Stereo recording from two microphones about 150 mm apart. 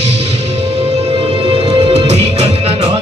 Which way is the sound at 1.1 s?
35° right (ahead or behind).